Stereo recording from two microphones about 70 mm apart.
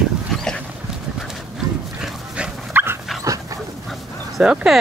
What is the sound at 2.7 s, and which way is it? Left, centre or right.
Dog, right.